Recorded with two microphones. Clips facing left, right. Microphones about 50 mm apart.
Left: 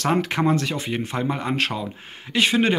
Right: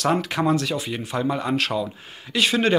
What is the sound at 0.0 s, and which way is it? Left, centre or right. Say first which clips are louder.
Speech: even; left.